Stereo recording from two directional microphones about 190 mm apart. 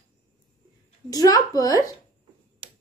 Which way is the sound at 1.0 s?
20° left (ahead or behind).